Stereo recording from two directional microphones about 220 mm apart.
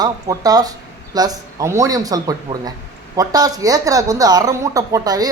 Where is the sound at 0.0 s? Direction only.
15° right (ahead or behind).